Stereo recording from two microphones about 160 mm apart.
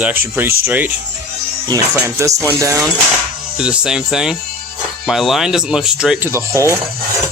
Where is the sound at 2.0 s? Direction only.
20° right (ahead or behind).